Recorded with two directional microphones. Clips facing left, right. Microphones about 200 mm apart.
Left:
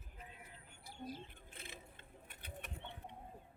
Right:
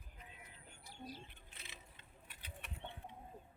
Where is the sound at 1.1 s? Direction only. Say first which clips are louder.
Left 4 dB; 50° left (ahead or behind).